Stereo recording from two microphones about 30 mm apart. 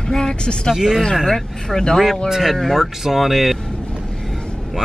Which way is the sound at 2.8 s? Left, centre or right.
Centre.